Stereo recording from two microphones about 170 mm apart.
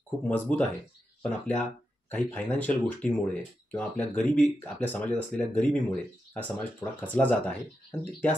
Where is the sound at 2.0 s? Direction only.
10° left (ahead or behind).